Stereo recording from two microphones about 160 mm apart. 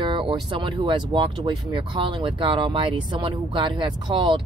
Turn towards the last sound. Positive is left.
turn(degrees=-30)  # may be behind; listen again after turning